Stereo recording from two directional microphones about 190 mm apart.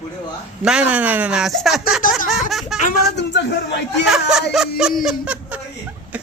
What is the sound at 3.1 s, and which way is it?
Speech, 65° left (ahead or behind).